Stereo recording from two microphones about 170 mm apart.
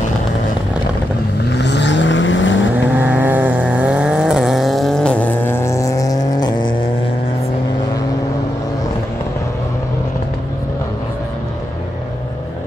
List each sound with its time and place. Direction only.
1.5 s vehicle: 90° left
3.0 s vehicle: 10° right (ahead or behind); by 6.7 s 25° left (ahead or behind)